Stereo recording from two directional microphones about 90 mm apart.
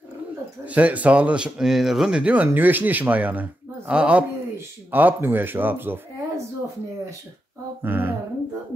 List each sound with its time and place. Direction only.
0.7 s speech: 15° right (ahead or behind)
7.8 s speech: 25° right (ahead or behind)